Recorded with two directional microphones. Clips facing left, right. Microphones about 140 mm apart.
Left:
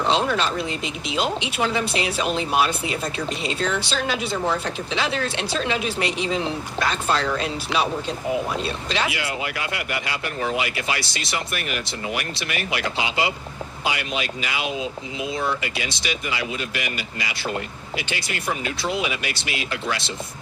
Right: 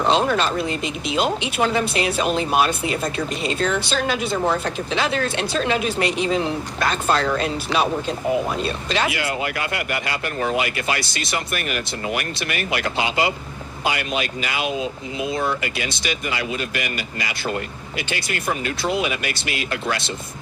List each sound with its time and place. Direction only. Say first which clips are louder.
0.1 s speech: right 3 dB; 45° right (ahead or behind)